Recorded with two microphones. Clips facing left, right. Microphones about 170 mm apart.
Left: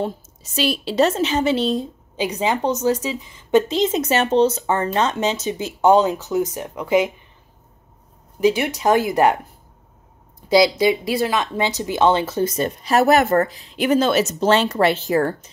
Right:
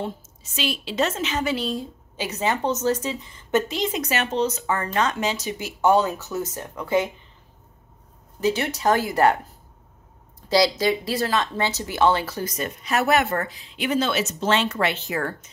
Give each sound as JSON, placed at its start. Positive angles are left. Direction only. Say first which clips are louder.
{"t": 0.0, "sound": "speech", "louder": "left 5 dB", "side_deg": 40}
{"t": 3.6, "sound": "speech", "louder": "left 6 dB", "side_deg": 25}
{"t": 8.4, "sound": "speech", "louder": "left 5 dB", "side_deg": 15}
{"t": 10.5, "sound": "speech", "louder": "left 5 dB", "side_deg": 15}